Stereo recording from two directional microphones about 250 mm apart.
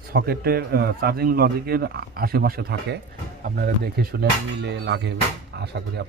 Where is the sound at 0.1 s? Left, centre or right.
Right.